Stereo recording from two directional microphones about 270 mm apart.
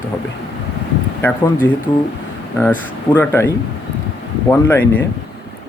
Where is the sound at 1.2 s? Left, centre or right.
Centre.